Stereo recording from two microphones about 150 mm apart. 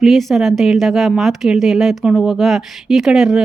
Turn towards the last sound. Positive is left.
turn(degrees=0)  # may be behind; listen again after turning